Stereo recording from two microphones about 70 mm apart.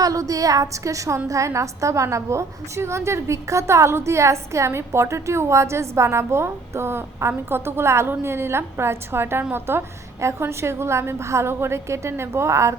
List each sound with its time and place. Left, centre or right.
0.0 s a woman's voice: right